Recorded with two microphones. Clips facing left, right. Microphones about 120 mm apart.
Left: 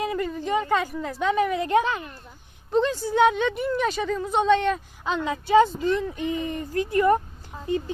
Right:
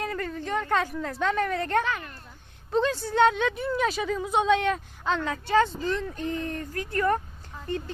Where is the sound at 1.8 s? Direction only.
20° left (ahead or behind).